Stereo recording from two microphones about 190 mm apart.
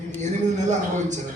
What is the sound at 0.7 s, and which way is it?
Speech, 40° right (ahead or behind).